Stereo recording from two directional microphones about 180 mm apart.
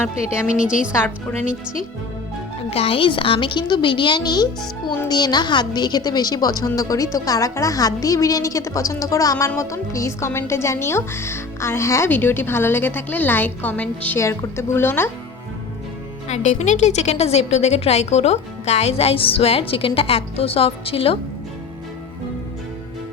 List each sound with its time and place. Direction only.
0.4 s a woman's voice: 5° right (ahead or behind)
2.6 s a woman's voice: 35° left (ahead or behind); by 15.1 s 10° left (ahead or behind)
16.3 s a woman's voice: 40° left (ahead or behind)